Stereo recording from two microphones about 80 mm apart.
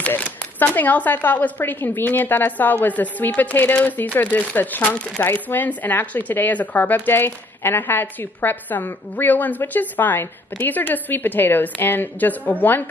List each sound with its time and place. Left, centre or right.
0.6 s speech: left
5.2 s speech: left